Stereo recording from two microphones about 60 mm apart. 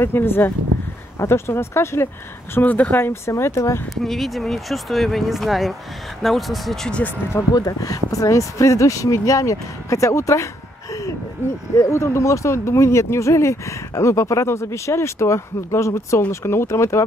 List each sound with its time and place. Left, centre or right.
0.0 s speech: left
2.6 s speech: left
4.0 s speech: centre
7.5 s speech: left
11.7 s speech: left